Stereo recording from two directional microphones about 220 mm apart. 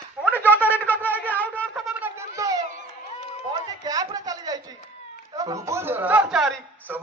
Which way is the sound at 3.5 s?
20° right (ahead or behind).